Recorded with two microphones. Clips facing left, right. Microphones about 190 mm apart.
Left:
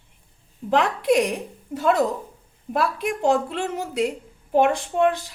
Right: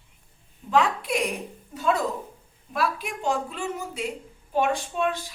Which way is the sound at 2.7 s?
65° left (ahead or behind).